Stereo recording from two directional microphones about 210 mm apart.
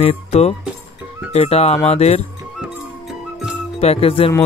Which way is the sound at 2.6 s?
Centre (ahead or behind).